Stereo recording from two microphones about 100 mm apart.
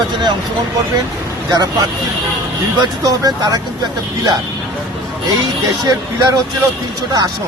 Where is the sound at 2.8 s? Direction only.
40° right (ahead or behind).